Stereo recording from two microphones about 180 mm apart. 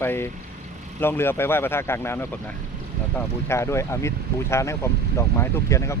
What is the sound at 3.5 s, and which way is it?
Speech, 15° left (ahead or behind).